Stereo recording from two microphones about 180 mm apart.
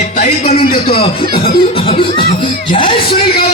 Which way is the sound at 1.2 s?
55° left (ahead or behind).